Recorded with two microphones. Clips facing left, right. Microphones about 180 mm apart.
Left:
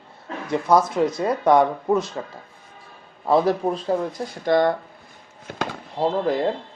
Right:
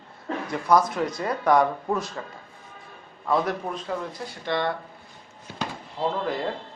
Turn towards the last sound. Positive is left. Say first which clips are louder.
# left 6 dB
turn(degrees=35)  # may be behind; listen again after turning